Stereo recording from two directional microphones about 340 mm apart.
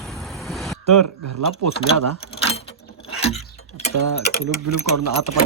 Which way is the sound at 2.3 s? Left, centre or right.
Centre.